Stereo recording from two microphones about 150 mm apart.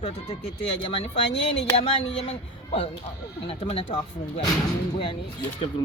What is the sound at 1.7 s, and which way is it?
Speech, 45° left (ahead or behind).